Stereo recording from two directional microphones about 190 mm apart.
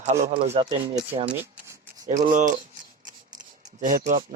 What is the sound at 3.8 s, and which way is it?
Speech, 40° right (ahead or behind).